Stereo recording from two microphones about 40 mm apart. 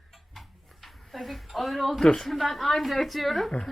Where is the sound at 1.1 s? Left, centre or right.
Centre.